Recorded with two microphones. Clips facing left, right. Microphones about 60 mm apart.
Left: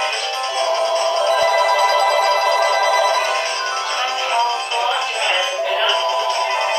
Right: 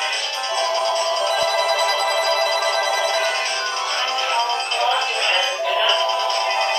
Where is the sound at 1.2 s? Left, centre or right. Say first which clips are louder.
Left 6 dB; left.